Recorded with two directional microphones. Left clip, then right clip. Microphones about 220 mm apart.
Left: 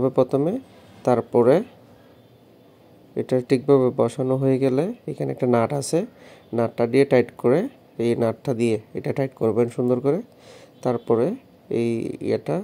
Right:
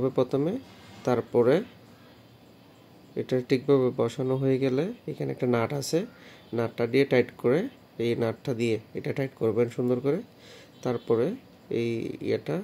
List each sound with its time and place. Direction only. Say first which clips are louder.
0.0 s speech: left 6 dB; 15° left (ahead or behind)
3.2 s speech: left 5 dB; 20° left (ahead or behind)